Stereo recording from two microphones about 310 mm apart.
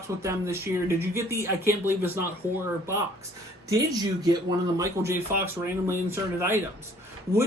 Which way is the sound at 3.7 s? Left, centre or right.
Centre.